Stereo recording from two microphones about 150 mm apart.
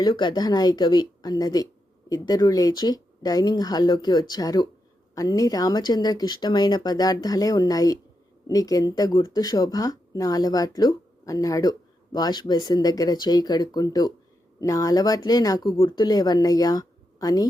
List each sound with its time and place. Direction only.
0.0 s speech: 30° left (ahead or behind)